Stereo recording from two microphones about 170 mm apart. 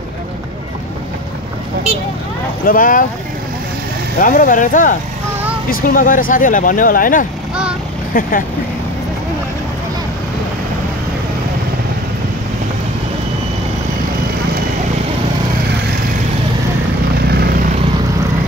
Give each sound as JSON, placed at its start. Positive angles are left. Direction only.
{"t": 2.6, "sound": "speech", "side_deg": 55}
{"t": 4.2, "sound": "speech", "side_deg": 50}
{"t": 17.3, "sound": "vehicle", "side_deg": -70}